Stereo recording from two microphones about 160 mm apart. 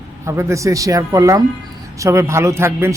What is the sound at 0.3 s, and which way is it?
Speech, 20° right (ahead or behind).